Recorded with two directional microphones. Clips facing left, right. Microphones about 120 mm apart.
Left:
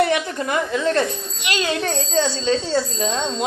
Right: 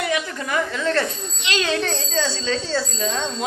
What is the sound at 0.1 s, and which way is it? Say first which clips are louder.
A child's voice: left 3 dB; 25° left (ahead or behind).